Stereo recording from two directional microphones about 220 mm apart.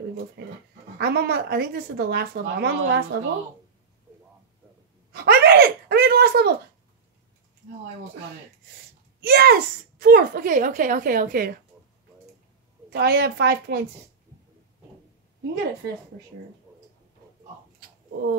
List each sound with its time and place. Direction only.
0.4 s dog: 50° right (ahead or behind)
0.9 s a woman's voice: 45° right (ahead or behind)
5.1 s a sound: 45° right (ahead or behind)
9.2 s a child's voice: 45° right (ahead or behind)
12.9 s a woman's voice: 45° right (ahead or behind)